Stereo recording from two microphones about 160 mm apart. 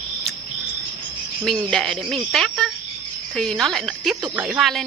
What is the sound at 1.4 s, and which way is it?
Speech, centre (ahead or behind).